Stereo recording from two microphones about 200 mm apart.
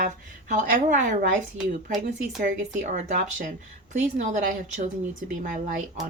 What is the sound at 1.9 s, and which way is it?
Speech, 45° right (ahead or behind).